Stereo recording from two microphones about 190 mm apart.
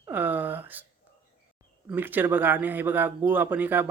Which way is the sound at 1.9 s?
10° right (ahead or behind).